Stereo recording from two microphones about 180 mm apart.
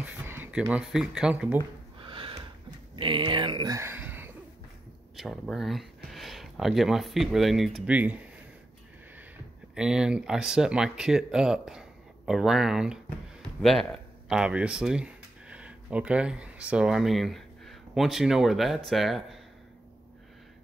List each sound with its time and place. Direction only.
0.0 s speech: 10° right (ahead or behind)
2.0 s snort: 30° right (ahead or behind)
3.0 s speech: 25° right (ahead or behind); by 8.2 s 10° right (ahead or behind)
9.8 s speech: 5° right (ahead or behind)